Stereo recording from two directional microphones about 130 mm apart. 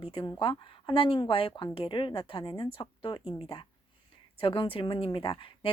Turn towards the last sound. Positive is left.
turn(degrees=45)  # may be behind; listen again after turning